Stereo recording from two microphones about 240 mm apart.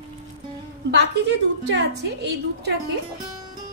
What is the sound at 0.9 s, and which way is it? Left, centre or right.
A woman's voice, right.